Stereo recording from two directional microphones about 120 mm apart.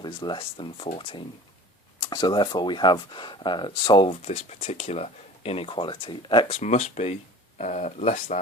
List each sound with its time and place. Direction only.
0.0 s speech: 40° left (ahead or behind)
6.5 s speech: 75° left (ahead or behind)